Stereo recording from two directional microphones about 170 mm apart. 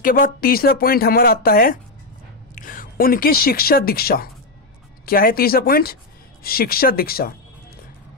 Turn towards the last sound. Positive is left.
turn(degrees=60)  # may be behind; listen again after turning